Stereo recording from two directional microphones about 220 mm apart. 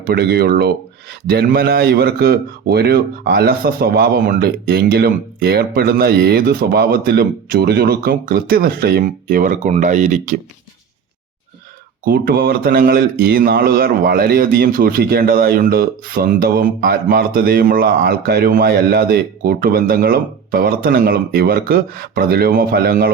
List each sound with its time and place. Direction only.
0.0 s speech: 45° right (ahead or behind)
12.0 s speech: 45° right (ahead or behind)